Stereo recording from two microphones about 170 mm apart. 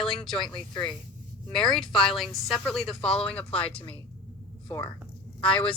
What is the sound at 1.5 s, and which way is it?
A woman's voice, centre (ahead or behind).